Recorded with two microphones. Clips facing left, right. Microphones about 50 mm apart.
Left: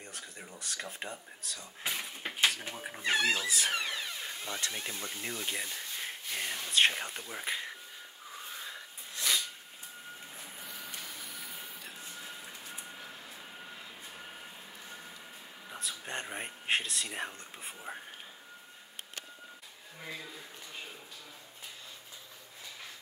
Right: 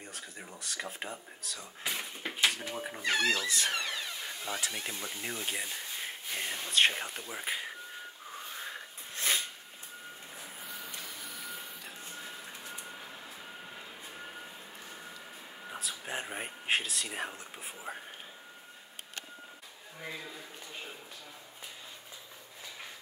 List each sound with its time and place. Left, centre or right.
0.0 s speech: centre
3.0 s speech: left
3.3 s speech: centre
4.5 s speech: centre
9.1 s a sound: right
10.6 s printer: centre
12.2 s a sound: centre
15.8 s speech: centre
20.0 s a sound: centre